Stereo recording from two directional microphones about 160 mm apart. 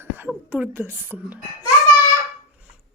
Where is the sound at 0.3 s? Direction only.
10° right (ahead or behind).